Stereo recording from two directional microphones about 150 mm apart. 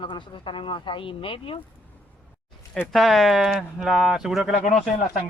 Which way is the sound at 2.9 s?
Centre (ahead or behind).